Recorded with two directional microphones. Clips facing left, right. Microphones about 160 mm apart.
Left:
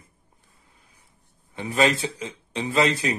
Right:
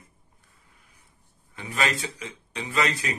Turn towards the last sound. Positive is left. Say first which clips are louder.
# left 5 dB
turn(degrees=30)  # may be behind; listen again after turning